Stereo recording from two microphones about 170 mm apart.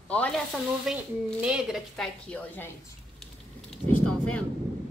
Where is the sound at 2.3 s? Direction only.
10° left (ahead or behind).